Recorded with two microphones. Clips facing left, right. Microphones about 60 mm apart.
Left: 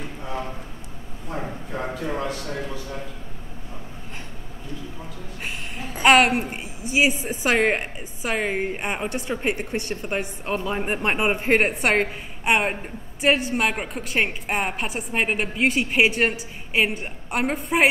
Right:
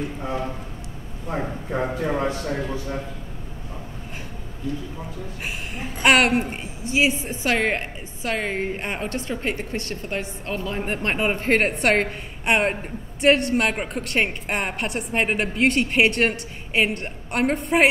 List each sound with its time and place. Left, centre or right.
1.3 s a man's voice: right
6.0 s a woman's voice: centre
6.8 s a woman's voice: centre